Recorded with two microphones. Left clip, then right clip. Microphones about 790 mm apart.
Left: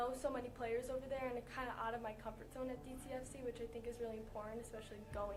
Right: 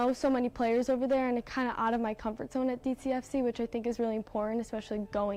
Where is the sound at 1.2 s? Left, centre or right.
Right.